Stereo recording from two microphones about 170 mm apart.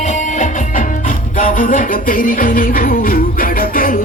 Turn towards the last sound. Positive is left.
turn(degrees=55)  # may be behind; listen again after turning